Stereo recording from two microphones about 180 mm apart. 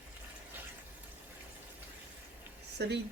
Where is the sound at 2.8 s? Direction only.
75° right (ahead or behind).